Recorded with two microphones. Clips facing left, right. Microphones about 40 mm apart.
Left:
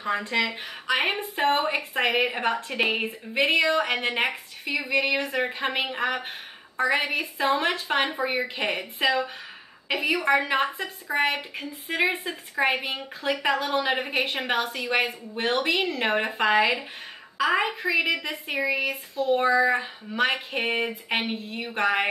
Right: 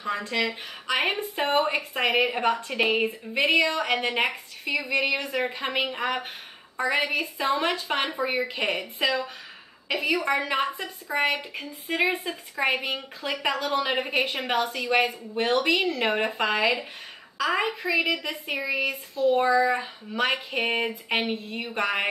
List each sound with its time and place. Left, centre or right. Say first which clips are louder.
0.2 s a woman's voice: left 1 dB; centre